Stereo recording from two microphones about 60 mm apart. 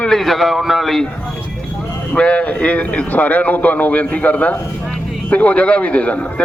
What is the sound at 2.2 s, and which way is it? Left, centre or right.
A man's voice, centre.